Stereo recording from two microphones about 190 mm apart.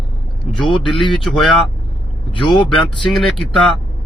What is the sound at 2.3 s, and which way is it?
Speech, 25° left (ahead or behind).